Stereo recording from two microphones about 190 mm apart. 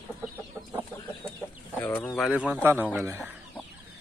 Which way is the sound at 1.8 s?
15° left (ahead or behind).